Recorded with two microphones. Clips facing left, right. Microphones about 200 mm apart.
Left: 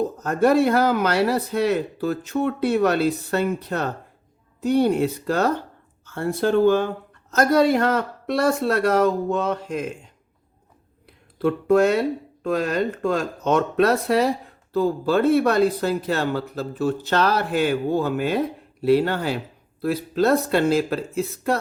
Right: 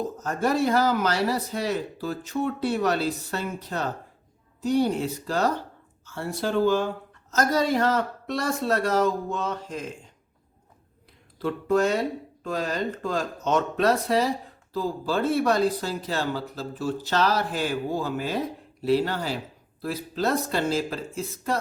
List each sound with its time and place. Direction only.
0.2 s speech: 60° left (ahead or behind)
11.4 s speech: 60° left (ahead or behind)